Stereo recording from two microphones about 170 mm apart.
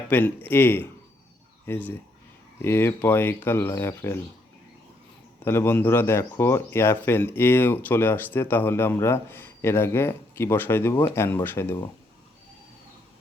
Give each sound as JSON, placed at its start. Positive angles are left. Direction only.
{"t": 0.1, "sound": "speech", "side_deg": 10}
{"t": 5.4, "sound": "speech", "side_deg": 15}